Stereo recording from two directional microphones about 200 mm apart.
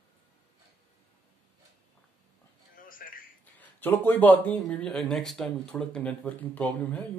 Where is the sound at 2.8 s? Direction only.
45° left (ahead or behind).